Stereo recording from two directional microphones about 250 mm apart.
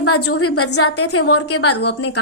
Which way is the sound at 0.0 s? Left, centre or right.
Left.